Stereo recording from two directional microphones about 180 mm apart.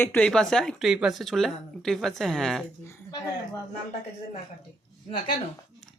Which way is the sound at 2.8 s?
20° left (ahead or behind).